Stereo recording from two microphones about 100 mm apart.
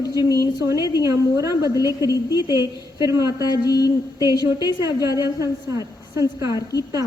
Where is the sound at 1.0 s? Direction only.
30° right (ahead or behind).